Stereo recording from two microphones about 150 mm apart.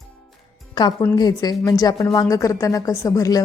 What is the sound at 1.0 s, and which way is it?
A woman's voice, 25° left (ahead or behind).